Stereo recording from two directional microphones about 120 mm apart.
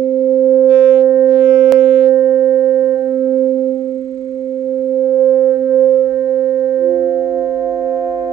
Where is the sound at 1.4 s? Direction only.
30° right (ahead or behind).